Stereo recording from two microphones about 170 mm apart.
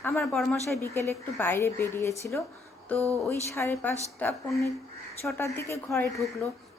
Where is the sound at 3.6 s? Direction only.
15° left (ahead or behind).